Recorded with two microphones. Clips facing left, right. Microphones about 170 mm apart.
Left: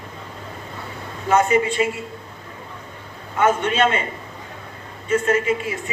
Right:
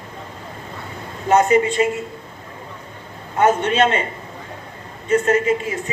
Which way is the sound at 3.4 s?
40° right (ahead or behind).